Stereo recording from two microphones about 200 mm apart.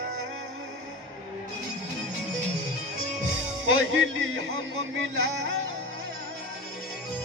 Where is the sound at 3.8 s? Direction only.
75° right (ahead or behind).